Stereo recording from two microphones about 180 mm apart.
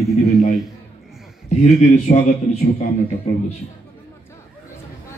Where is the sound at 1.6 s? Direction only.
40° left (ahead or behind).